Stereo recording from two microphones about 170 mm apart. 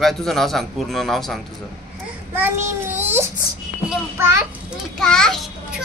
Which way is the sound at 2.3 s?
10° right (ahead or behind).